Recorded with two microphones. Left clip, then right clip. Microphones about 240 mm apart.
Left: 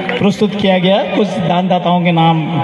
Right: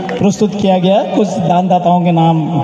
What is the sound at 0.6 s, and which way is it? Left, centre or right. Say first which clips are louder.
A man's voice: right 1 dB; right.